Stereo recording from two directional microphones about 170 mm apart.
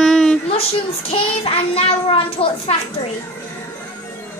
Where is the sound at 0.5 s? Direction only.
35° left (ahead or behind).